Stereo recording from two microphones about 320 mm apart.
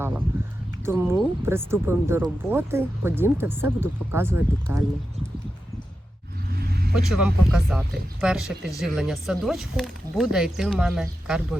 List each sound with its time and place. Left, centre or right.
0.9 s speech: centre
6.5 s vehicle: right
6.9 s speech: centre